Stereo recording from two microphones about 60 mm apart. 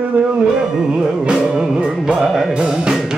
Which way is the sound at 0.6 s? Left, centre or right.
Centre.